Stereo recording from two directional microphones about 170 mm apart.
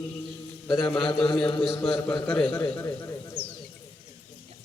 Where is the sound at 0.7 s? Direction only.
25° left (ahead or behind).